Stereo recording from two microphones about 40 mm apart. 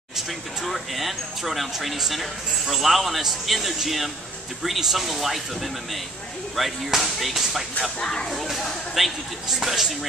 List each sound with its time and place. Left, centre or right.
0.7 s speech: centre
6.5 s speech: centre
8.0 s speech: centre
8.9 s speech: centre